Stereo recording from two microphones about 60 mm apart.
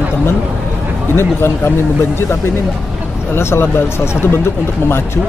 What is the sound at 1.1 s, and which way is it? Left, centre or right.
Speech, left.